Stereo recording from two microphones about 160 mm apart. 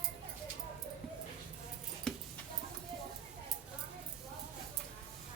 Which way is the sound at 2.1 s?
5° left (ahead or behind).